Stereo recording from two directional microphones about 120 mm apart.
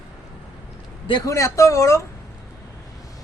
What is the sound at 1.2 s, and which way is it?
Speech, 25° left (ahead or behind).